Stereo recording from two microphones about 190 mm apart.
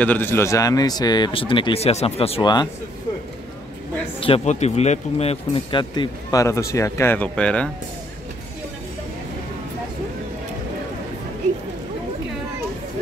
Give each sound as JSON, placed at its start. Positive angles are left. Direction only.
{"t": 0.0, "sound": "speech", "side_deg": 10}
{"t": 4.2, "sound": "speech", "side_deg": 30}